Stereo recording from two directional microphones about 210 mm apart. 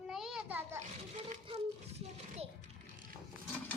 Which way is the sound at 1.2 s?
30° right (ahead or behind).